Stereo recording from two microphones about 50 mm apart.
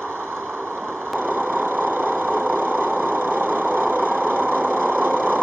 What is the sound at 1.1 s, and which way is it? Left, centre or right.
Vehicle, right.